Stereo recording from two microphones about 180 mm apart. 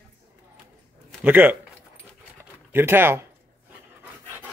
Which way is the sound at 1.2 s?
10° right (ahead or behind).